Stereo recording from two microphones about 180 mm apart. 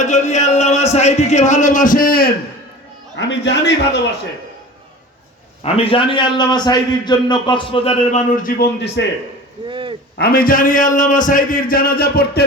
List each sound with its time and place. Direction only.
0.0 s speech: 40° left (ahead or behind)
3.2 s a man's voice: 80° left
5.6 s a man's voice: 35° left (ahead or behind); by 9.0 s 65° left (ahead or behind)
9.6 s a sound: 25° right (ahead or behind)
10.2 s a man's voice: 55° left (ahead or behind)